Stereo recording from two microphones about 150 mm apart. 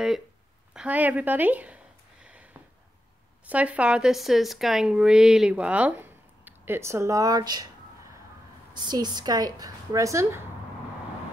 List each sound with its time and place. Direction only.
0.7 s speech: 10° right (ahead or behind)
2.2 s a sound: 10° right (ahead or behind)
3.4 s speech: 10° right (ahead or behind); by 7.6 s 25° right (ahead or behind)
8.7 s a woman's voice: 30° right (ahead or behind)